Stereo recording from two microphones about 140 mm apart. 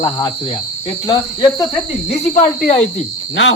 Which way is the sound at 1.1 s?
25° left (ahead or behind).